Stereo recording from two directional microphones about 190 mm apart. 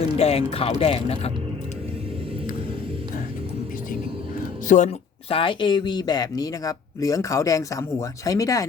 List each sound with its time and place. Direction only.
0.2 s speech: 30° left (ahead or behind)
4.7 s speech: 35° left (ahead or behind); by 8.6 s 15° left (ahead or behind)